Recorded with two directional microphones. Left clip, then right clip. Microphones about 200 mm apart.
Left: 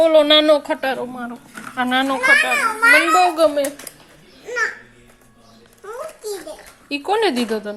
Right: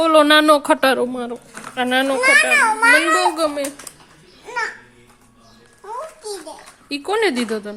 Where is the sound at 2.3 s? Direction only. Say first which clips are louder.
Right 2 dB; 50° right (ahead or behind).